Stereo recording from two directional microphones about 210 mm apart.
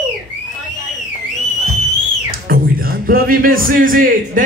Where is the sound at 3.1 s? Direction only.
45° right (ahead or behind).